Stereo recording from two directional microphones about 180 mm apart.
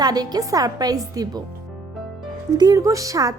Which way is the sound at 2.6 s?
20° right (ahead or behind).